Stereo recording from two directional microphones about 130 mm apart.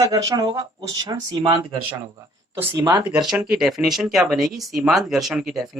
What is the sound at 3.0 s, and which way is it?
Speech, 5° right (ahead or behind).